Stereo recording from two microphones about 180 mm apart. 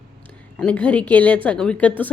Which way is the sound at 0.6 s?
5° left (ahead or behind).